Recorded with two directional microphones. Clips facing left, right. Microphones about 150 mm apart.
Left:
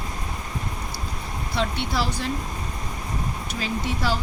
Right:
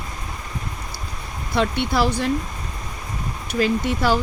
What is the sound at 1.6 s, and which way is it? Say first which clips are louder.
Speech: right 6 dB; 55° right (ahead or behind).